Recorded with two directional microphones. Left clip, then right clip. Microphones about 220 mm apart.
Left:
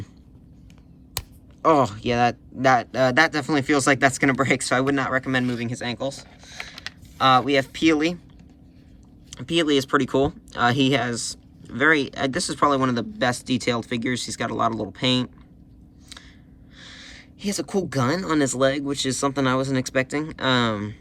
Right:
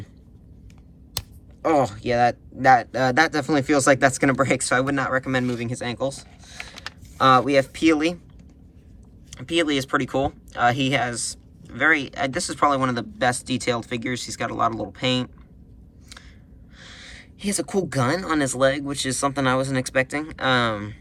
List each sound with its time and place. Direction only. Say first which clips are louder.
1.6 s speech: left 2 dB; 15° left (ahead or behind)
9.3 s speech: left 1 dB; 15° left (ahead or behind)
16.7 s speech: even; 10° left (ahead or behind)